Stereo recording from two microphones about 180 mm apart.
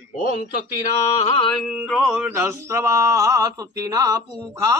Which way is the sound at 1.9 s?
5° right (ahead or behind).